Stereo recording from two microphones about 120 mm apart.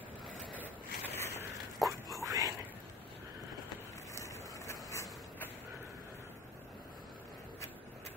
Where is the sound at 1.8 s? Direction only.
30° right (ahead or behind).